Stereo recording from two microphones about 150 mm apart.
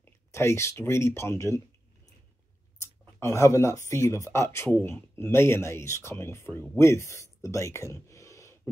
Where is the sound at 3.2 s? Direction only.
20° left (ahead or behind).